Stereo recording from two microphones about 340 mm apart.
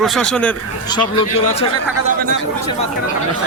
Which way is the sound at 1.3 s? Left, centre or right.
Centre.